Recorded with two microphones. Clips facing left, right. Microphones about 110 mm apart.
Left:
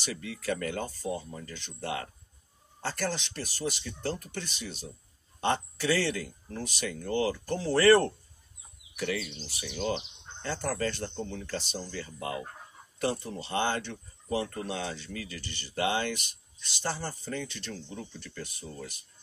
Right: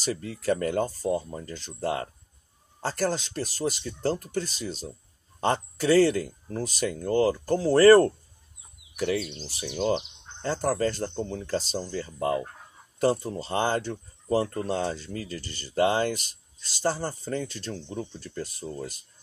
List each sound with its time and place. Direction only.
0.0 s speech: 35° right (ahead or behind)
9.1 s speech: 30° right (ahead or behind)